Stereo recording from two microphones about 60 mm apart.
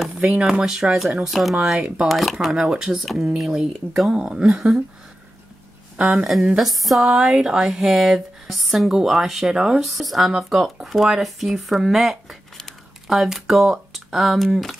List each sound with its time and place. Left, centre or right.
0.1 s speech: centre
1.6 s speech: centre
2.0 s speech: centre
5.9 s speech: right
6.6 s speech: centre